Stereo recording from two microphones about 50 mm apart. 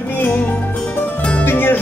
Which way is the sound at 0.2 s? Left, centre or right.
Left.